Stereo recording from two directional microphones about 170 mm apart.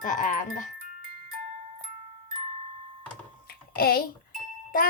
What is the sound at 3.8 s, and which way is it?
Speech, 60° left (ahead or behind).